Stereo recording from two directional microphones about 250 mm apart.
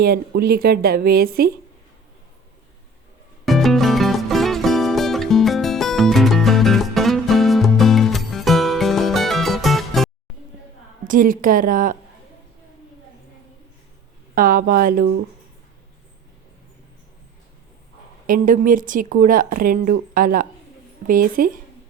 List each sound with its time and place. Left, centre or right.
0.0 s speech: right
3.4 s music: centre
11.0 s speech: right
14.3 s speech: right
18.3 s speech: right